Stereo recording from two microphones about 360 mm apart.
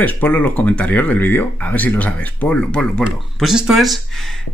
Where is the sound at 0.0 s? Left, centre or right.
Centre.